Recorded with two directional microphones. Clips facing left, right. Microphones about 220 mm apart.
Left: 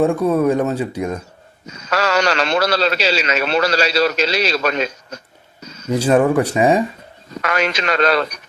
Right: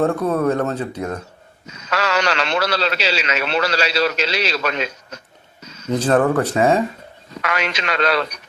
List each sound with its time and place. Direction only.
0.0 s speech: 10° left (ahead or behind)
1.6 s a man's voice: 40° left (ahead or behind)
5.9 s speech: 10° left (ahead or behind)
7.4 s a man's voice: 40° left (ahead or behind)